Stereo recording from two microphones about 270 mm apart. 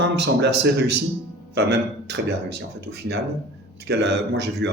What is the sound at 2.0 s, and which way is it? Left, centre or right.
Speech, right.